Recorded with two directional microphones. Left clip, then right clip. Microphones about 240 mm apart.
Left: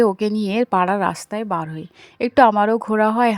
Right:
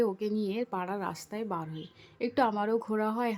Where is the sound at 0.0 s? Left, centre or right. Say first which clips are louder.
Left 12 dB; left.